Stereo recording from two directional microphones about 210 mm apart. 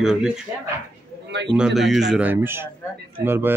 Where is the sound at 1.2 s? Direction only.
55° right (ahead or behind).